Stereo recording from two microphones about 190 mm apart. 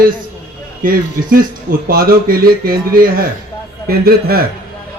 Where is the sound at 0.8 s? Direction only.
50° right (ahead or behind).